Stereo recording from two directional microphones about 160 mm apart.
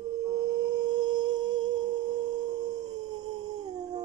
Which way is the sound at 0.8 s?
25° right (ahead or behind).